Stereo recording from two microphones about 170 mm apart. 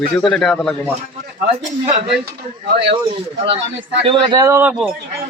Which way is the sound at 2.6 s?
80° right.